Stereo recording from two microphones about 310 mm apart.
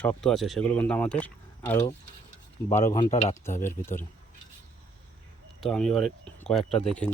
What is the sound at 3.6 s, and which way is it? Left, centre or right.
Speech, centre.